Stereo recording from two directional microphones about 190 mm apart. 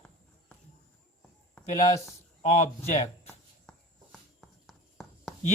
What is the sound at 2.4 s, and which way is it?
Speech, 35° left (ahead or behind).